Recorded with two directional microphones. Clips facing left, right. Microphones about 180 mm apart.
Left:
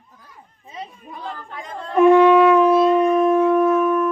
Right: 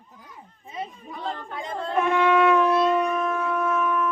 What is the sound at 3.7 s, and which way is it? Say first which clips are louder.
Shofar: left 7 dB; 45° left (ahead or behind).